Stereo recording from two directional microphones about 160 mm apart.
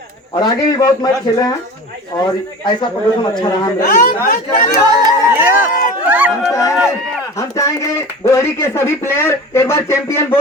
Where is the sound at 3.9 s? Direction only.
60° left (ahead or behind).